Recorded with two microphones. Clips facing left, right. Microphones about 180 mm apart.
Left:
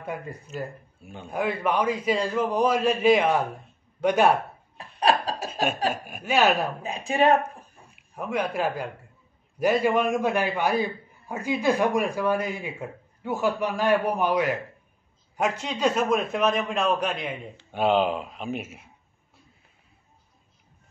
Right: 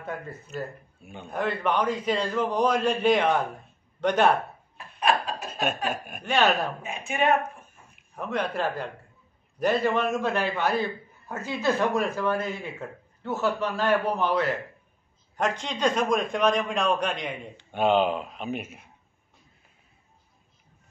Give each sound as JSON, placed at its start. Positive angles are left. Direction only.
{"t": 0.0, "sound": "a man's voice", "side_deg": 10}
{"t": 4.7, "sound": "laughter", "side_deg": 35}
{"t": 5.5, "sound": "chuckle", "side_deg": 10}
{"t": 6.0, "sound": "a man's voice", "side_deg": 5}
{"t": 6.8, "sound": "speech", "side_deg": 35}
{"t": 8.2, "sound": "a man's voice", "side_deg": 10}